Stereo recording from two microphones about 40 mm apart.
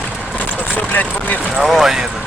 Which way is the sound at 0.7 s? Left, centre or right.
Left.